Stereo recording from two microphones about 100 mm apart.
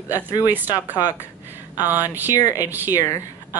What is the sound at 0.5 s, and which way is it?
Speech, 20° right (ahead or behind).